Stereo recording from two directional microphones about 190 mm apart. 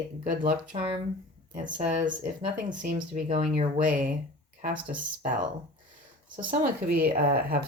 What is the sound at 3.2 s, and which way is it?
Speech, 30° right (ahead or behind).